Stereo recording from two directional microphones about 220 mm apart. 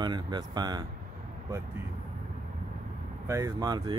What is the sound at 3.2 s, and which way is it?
Speech, 15° right (ahead or behind).